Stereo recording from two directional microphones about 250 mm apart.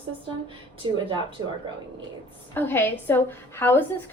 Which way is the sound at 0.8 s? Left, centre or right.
Centre.